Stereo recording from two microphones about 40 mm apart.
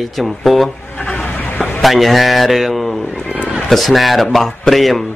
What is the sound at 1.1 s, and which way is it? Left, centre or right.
Vehicle, left.